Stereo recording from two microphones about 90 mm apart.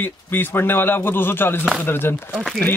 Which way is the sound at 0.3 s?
25° left (ahead or behind).